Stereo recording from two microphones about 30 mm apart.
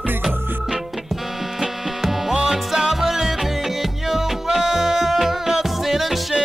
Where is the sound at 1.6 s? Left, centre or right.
Centre.